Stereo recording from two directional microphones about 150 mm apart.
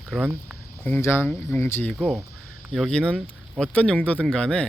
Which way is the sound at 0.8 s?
15° left (ahead or behind).